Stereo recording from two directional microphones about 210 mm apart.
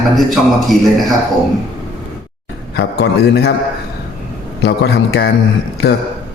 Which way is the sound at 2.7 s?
50° left (ahead or behind).